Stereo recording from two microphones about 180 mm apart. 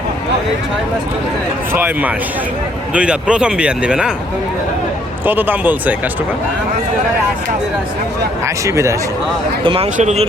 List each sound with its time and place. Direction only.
1.7 s speech: 10° right (ahead or behind)
5.2 s speech: 10° right (ahead or behind)
8.4 s speech: 15° right (ahead or behind)
9.6 s speech: 30° right (ahead or behind)